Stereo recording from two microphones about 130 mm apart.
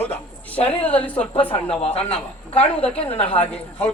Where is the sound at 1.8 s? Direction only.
50° left (ahead or behind).